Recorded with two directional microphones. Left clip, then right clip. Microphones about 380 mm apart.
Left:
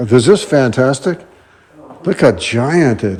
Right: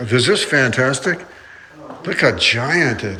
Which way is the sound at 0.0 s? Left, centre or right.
Centre.